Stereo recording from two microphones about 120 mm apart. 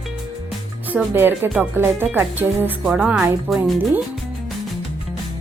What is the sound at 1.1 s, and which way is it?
Speech, 20° right (ahead or behind).